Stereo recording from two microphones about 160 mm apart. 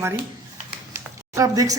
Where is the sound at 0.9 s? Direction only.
20° right (ahead or behind).